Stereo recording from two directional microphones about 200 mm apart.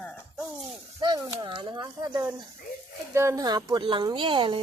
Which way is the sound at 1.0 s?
20° right (ahead or behind).